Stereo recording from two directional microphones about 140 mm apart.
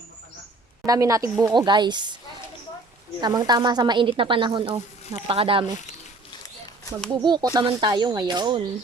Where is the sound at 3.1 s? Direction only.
30° right (ahead or behind).